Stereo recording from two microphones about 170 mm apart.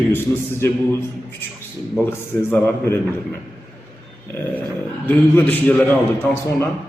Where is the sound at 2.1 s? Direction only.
15° left (ahead or behind).